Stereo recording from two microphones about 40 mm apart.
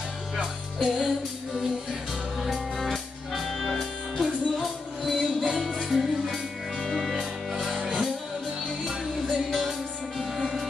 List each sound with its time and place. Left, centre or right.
0.8 s music: centre
2.4 s music: centre
5.9 s music: centre
7.7 s music: right
9.6 s music: centre